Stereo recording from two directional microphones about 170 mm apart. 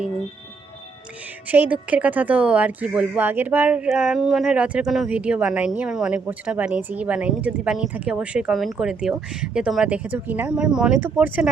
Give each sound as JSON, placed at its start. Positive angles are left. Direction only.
{"t": 1.5, "sound": "speech", "side_deg": -10}